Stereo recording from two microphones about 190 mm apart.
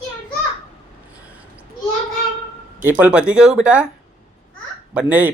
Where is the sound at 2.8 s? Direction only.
10° right (ahead or behind).